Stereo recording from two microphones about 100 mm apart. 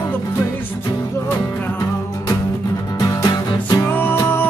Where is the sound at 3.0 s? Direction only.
35° left (ahead or behind).